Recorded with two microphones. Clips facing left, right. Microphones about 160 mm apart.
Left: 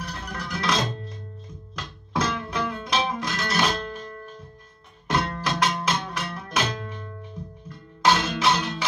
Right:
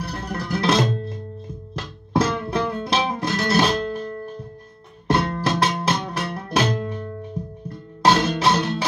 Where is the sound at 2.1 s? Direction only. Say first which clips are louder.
Right 5 dB; 35° right (ahead or behind).